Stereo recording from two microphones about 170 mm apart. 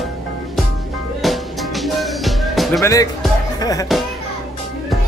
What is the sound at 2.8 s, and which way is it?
Speech, 20° left (ahead or behind).